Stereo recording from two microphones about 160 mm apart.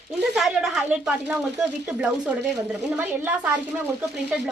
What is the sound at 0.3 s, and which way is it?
A woman's voice, centre (ahead or behind).